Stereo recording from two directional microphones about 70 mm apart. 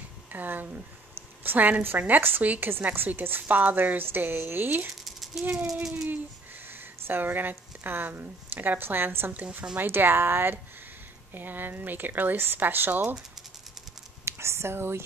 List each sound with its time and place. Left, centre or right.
0.3 s a woman's voice: right
5.0 s a sound: centre
5.5 s speech: centre
6.7 s a woman's voice: right
14.2 s speech: right